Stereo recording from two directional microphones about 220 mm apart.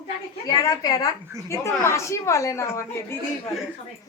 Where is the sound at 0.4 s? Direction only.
15° left (ahead or behind).